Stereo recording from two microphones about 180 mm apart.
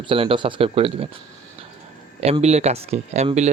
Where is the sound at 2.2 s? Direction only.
35° right (ahead or behind).